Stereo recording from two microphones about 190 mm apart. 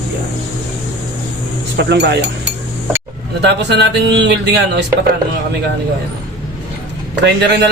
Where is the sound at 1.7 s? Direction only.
65° right (ahead or behind).